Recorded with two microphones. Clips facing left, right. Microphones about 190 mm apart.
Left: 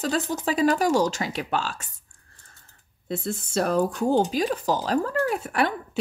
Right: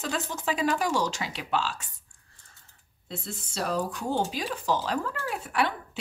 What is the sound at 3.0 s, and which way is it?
A woman's voice, 55° left (ahead or behind).